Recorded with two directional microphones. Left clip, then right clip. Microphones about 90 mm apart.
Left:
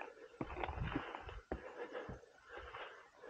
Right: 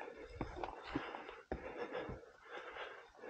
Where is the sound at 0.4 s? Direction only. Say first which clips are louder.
Left 2 dB; 40° right (ahead or behind).